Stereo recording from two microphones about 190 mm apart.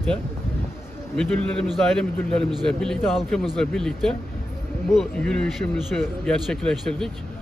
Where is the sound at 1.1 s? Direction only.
5° left (ahead or behind).